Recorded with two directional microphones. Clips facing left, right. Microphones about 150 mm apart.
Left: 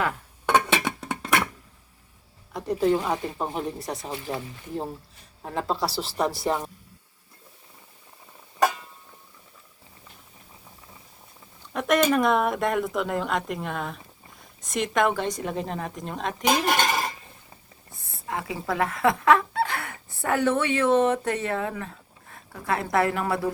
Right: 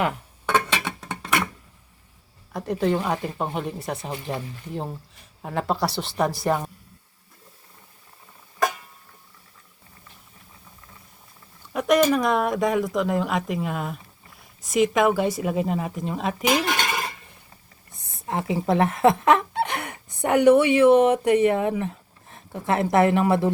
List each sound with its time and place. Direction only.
2.5 s speech: centre (ahead or behind)
11.7 s speech: centre (ahead or behind)
16.4 s cutlery: 40° left (ahead or behind)
17.9 s speech: 20° right (ahead or behind)